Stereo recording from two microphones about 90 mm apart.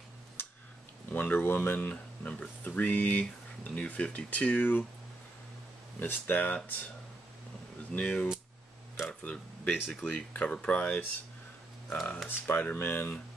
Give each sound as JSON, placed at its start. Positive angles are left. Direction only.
{"t": 0.4, "sound": "a sound", "side_deg": 25}
{"t": 1.1, "sound": "speech", "side_deg": 20}
{"t": 5.9, "sound": "speech", "side_deg": 20}
{"t": 7.9, "sound": "speech", "side_deg": 15}
{"t": 8.9, "sound": "a sound", "side_deg": 30}
{"t": 9.3, "sound": "speech", "side_deg": 15}
{"t": 12.3, "sound": "speech", "side_deg": 25}